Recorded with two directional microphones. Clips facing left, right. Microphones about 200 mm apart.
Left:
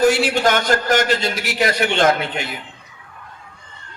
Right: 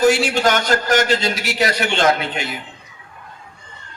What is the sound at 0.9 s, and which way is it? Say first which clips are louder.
A man's voice: right 1 dB; 55° left (ahead or behind).